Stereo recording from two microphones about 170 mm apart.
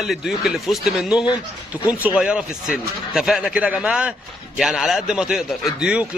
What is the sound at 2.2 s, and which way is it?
Speech, 5° right (ahead or behind).